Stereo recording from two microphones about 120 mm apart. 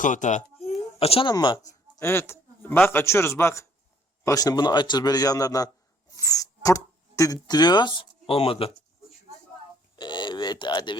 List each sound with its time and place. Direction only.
0.0 s speech: 90° left
0.9 s speech: 55° left (ahead or behind)
1.3 s a man's voice: 35° left (ahead or behind)
2.0 s a man's voice: 20° left (ahead or behind); by 8.7 s 50° left (ahead or behind)
9.9 s speech: 40° left (ahead or behind)